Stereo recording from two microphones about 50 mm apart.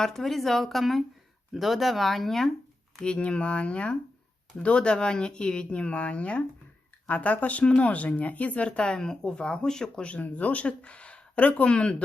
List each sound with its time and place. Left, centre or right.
0.0 s speech: centre
3.0 s speech: left
10.1 s speech: left